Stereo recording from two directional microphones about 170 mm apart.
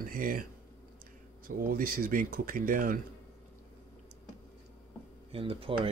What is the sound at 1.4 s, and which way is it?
Speech, 55° right (ahead or behind).